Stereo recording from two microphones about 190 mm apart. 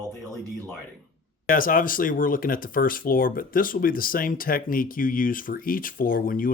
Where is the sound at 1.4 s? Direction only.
45° left (ahead or behind).